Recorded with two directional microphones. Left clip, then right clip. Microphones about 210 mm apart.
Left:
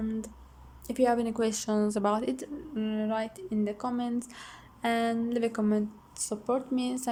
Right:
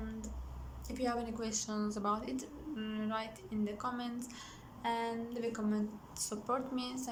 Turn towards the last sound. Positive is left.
turn(degrees=25)  # may be behind; listen again after turning